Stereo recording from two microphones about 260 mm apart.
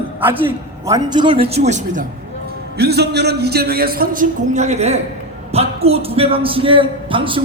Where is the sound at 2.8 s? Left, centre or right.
Right.